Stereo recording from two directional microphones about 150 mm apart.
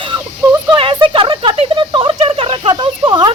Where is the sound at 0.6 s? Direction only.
35° right (ahead or behind).